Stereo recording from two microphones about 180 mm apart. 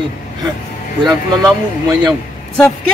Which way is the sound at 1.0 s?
20° right (ahead or behind).